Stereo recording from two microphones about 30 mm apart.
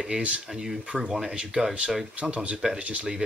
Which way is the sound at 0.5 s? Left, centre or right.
Centre.